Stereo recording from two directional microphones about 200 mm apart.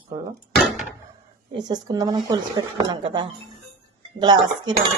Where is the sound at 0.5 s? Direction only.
Centre (ahead or behind).